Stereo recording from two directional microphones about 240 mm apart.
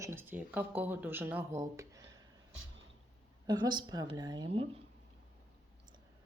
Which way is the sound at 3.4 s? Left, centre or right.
Centre.